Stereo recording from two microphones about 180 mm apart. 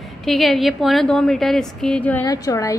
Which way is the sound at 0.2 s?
Centre (ahead or behind).